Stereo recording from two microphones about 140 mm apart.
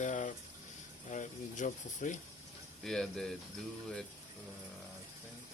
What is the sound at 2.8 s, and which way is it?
Speech, 5° left (ahead or behind).